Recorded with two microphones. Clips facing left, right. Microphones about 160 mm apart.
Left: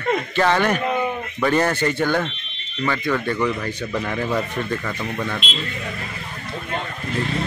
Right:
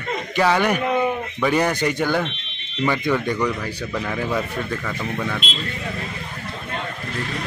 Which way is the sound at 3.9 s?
Centre (ahead or behind).